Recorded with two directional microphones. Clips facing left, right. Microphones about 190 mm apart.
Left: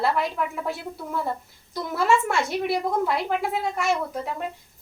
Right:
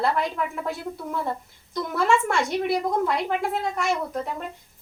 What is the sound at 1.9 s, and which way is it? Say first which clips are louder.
Speech: even; 5° left (ahead or behind).